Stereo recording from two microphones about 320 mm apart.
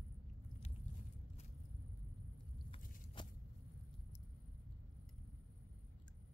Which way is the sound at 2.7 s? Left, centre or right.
Left.